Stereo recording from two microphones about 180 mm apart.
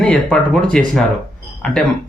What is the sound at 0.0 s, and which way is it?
Speech, 5° left (ahead or behind).